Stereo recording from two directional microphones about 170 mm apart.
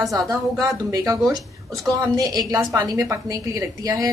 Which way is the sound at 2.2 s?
20° right (ahead or behind).